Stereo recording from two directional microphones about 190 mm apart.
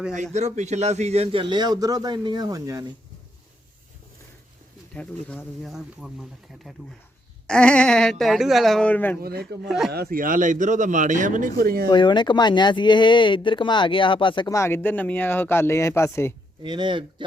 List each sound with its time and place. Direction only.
0.3 s a man's voice: 35° right (ahead or behind); by 2.8 s 15° right (ahead or behind)
4.9 s speech: 5° left (ahead or behind)
9.2 s speech: 55° right (ahead or behind)
9.6 s speech: centre (ahead or behind)
9.9 s a man's voice: 55° right (ahead or behind)
11.9 s speech: 25° left (ahead or behind)
16.6 s a man's voice: 25° right (ahead or behind)